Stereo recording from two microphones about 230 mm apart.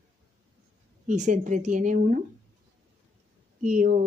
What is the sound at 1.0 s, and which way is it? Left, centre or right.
Speech, right.